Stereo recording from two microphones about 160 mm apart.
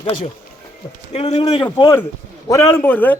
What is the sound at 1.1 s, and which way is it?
Speech, 40° left (ahead or behind).